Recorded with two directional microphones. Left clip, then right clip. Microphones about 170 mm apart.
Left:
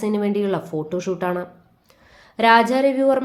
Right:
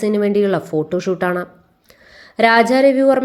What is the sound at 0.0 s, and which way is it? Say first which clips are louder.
A woman's voice: right 6 dB; 25° right (ahead or behind).